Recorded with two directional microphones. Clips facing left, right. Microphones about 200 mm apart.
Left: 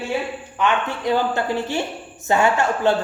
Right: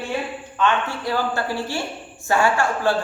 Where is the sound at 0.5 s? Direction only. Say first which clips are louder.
Even; 15° left (ahead or behind).